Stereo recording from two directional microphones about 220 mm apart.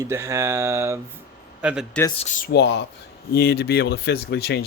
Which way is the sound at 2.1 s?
30° left (ahead or behind).